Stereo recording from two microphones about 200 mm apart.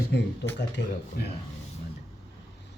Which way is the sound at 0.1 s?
60° left (ahead or behind).